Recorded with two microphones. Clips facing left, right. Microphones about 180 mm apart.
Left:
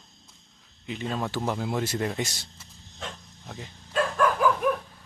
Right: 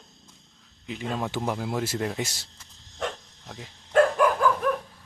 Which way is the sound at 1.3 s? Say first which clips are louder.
Left 1 dB; 5° right (ahead or behind).